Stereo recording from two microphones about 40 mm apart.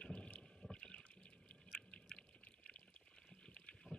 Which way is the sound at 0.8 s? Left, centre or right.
Left.